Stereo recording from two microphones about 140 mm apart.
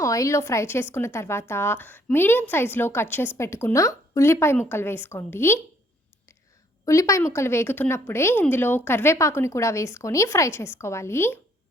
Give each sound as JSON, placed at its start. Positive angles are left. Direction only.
{"t": 0.0, "sound": "a woman's voice", "side_deg": 25}
{"t": 6.8, "sound": "speech", "side_deg": 20}